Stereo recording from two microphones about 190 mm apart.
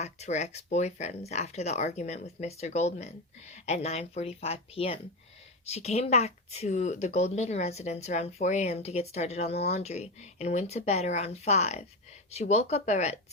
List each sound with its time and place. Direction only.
0.0 s speech: 35° left (ahead or behind)